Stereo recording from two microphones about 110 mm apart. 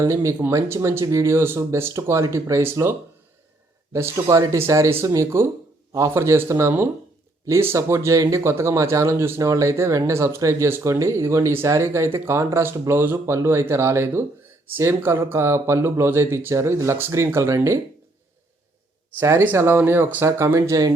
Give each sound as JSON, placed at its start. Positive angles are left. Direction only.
{"t": 0.0, "sound": "speech", "side_deg": -30}
{"t": 3.9, "sound": "speech", "side_deg": -30}
{"t": 19.2, "sound": "speech", "side_deg": -20}